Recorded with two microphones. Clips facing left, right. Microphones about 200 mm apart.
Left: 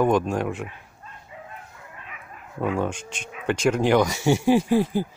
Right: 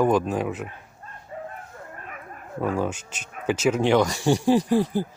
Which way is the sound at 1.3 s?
45° right (ahead or behind).